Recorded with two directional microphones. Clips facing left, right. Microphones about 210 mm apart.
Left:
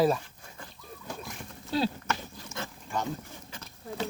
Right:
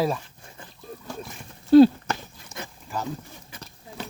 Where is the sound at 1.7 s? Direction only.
55° right (ahead or behind).